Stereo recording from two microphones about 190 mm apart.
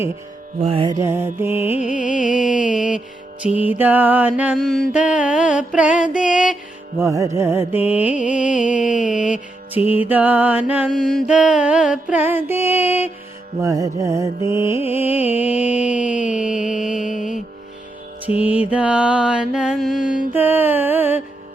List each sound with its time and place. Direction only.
0.6 s music: 30° right (ahead or behind)
0.9 s mantra: 15° right (ahead or behind)
1.8 s music: 40° left (ahead or behind)
2.3 s mantra: 5° right (ahead or behind)
7.0 s mantra: 15° right (ahead or behind)
8.7 s mantra: 40° left (ahead or behind)
9.7 s mantra: 10° right (ahead or behind)
14.8 s music: 10° right (ahead or behind)
16.3 s music: 40° left (ahead or behind)
18.3 s mantra: 10° right (ahead or behind)
20.3 s music: 10° right (ahead or behind)